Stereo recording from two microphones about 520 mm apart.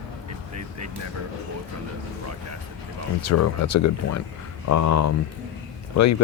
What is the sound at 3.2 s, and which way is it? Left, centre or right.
Speech, left.